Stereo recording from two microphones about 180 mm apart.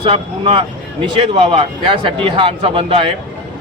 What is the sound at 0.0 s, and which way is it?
A man's voice, 30° right (ahead or behind).